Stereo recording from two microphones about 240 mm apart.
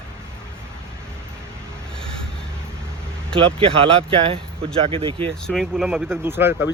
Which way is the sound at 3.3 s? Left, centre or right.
Right.